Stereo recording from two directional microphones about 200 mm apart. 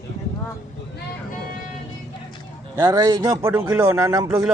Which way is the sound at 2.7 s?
15° right (ahead or behind).